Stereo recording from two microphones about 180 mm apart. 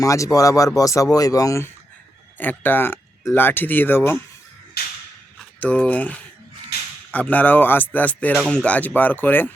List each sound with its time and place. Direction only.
0.0 s speech: 20° left (ahead or behind)
4.8 s whip: 60° left (ahead or behind)
5.5 s speech: 10° left (ahead or behind)